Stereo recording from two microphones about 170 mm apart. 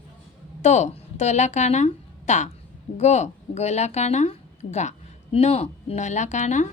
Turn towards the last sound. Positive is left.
turn(degrees=45)  # may be behind; listen again after turning